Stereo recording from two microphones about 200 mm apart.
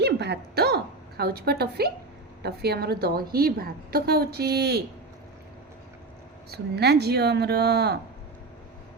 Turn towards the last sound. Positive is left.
turn(degrees=-55)  # may be behind; listen again after turning